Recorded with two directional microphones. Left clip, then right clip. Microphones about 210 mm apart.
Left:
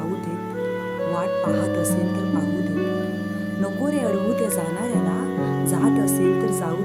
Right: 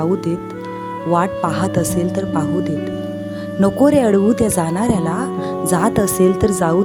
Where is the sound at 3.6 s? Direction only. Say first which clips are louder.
Right 12 dB; 40° right (ahead or behind).